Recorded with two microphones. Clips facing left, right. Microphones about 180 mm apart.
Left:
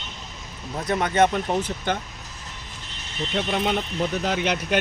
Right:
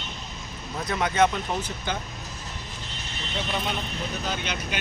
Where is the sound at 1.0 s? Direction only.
50° left (ahead or behind).